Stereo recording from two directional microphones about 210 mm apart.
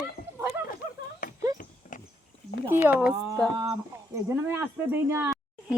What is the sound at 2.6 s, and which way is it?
Speech, 10° right (ahead or behind).